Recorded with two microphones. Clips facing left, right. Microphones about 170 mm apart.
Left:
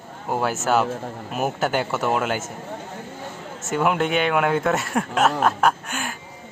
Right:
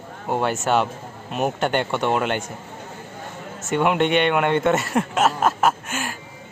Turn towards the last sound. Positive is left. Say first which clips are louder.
# even
turn(degrees=0)  # may be behind; listen again after turning